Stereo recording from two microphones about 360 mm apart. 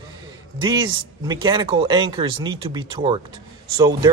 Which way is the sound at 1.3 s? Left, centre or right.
Centre.